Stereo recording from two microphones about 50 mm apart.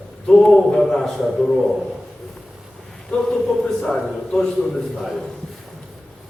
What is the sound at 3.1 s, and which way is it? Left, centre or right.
A man's voice, centre.